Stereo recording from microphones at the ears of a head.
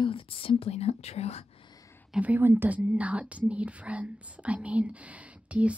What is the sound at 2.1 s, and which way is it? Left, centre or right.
Speech, centre.